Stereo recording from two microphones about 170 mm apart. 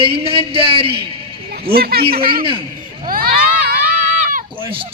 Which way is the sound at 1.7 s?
65° right (ahead or behind).